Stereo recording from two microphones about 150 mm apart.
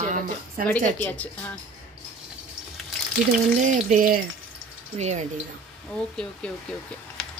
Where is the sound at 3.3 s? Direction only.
55° right (ahead or behind).